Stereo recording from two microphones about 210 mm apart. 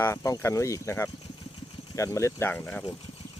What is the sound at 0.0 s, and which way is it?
Speech, 15° left (ahead or behind).